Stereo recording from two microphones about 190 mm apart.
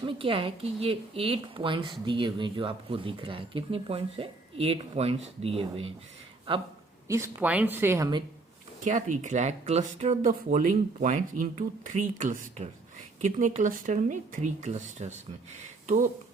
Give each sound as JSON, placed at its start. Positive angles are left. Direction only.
{"t": 0.0, "sound": "a woman's voice", "side_deg": -30}
{"t": 7.1, "sound": "speech", "side_deg": -10}
{"t": 8.8, "sound": "speech", "side_deg": -40}